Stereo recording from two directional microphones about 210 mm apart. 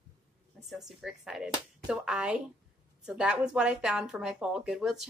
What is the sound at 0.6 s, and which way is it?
Speech, centre (ahead or behind).